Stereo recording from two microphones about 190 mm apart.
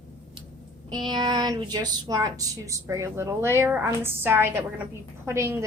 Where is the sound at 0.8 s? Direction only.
25° right (ahead or behind).